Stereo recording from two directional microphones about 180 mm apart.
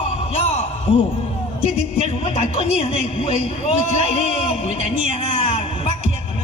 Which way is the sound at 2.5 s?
30° left (ahead or behind).